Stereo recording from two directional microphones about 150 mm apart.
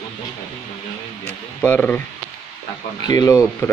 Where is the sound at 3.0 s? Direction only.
25° left (ahead or behind).